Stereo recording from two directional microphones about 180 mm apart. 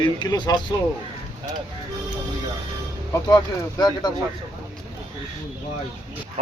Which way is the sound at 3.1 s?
20° left (ahead or behind).